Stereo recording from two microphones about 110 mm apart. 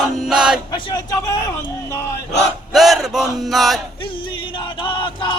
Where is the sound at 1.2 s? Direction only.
30° left (ahead or behind).